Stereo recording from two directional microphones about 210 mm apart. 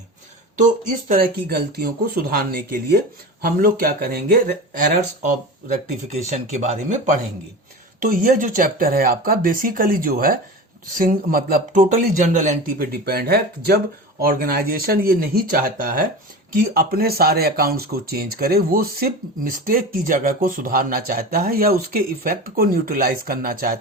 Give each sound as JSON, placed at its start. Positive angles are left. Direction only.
{"t": 0.5, "sound": "speech", "side_deg": -35}
{"t": 6.3, "sound": "speech", "side_deg": -35}